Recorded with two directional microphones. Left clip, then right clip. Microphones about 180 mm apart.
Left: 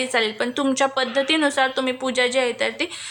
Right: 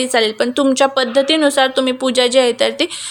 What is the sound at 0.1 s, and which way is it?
A woman's voice, 25° right (ahead or behind).